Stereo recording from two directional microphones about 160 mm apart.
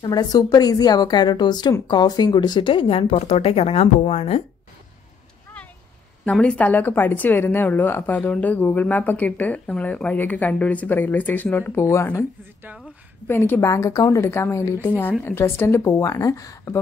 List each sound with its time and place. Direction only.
0.0 s a woman's voice: 25° left (ahead or behind); by 4.4 s 40° left (ahead or behind)
6.2 s speech: 5° left (ahead or behind)
13.3 s speech: 15° left (ahead or behind)